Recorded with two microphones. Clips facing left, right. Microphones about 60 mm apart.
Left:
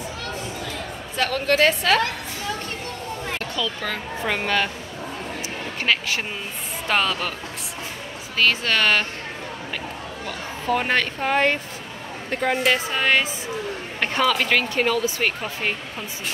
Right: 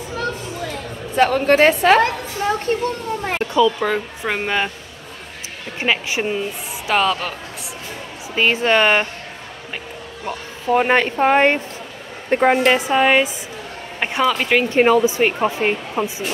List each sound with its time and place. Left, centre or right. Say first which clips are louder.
1.1 s a woman's voice: right 7 dB; right
3.5 s speech: right 14 dB; centre
5.8 s speech: right 3 dB; centre
6.9 s speech: right 4 dB; centre
8.4 s speech: right 5 dB; right
10.2 s a woman's voice: right 4 dB; centre
12.7 s speech: right 6 dB; centre
14.7 s speech: right 8 dB; right